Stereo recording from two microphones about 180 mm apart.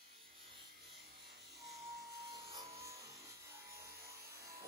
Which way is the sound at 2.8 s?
15° right (ahead or behind).